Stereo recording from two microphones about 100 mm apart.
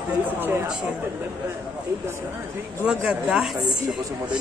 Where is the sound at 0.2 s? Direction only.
20° right (ahead or behind).